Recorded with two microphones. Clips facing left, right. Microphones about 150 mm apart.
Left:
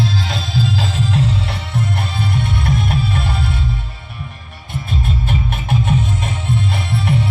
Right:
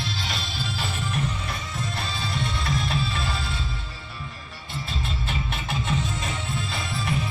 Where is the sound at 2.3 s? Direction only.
55° left (ahead or behind).